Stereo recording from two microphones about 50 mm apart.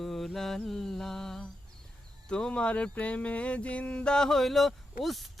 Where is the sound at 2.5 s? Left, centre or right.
Left.